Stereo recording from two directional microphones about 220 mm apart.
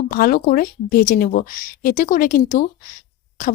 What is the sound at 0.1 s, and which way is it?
Speech, 40° left (ahead or behind).